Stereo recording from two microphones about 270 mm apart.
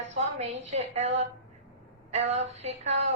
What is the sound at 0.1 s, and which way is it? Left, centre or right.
A woman's voice, right.